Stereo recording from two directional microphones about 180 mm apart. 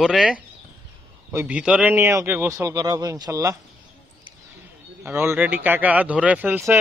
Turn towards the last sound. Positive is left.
turn(degrees=-10)  # may be behind; listen again after turning